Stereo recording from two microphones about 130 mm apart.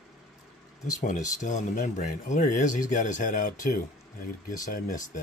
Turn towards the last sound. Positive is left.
turn(degrees=90)